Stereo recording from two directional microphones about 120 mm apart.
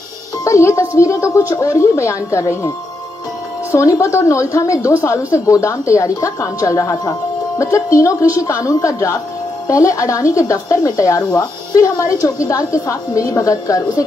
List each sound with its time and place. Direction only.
0.4 s speech: 25° left (ahead or behind)
3.7 s speech: 25° left (ahead or behind)